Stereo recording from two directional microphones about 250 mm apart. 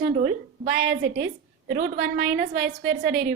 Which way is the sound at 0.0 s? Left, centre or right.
Right.